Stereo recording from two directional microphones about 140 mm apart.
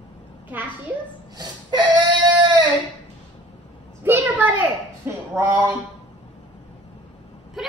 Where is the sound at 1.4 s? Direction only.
30° right (ahead or behind).